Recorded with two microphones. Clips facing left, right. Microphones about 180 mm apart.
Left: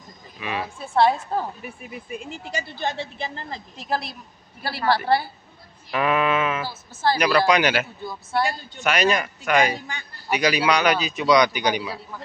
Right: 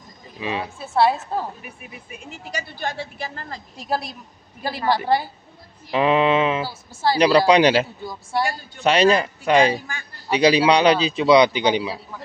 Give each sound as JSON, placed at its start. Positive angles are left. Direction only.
{"t": 0.4, "sound": "speech", "side_deg": -25}
{"t": 0.7, "sound": "a woman's voice", "side_deg": -5}
{"t": 2.5, "sound": "a woman's voice", "side_deg": 20}
{"t": 4.6, "sound": "a woman's voice", "side_deg": -15}
{"t": 6.6, "sound": "a woman's voice", "side_deg": -10}
{"t": 7.3, "sound": "a man's voice", "side_deg": -30}
{"t": 8.0, "sound": "a woman's voice", "side_deg": -10}
{"t": 8.8, "sound": "a man's voice", "side_deg": -30}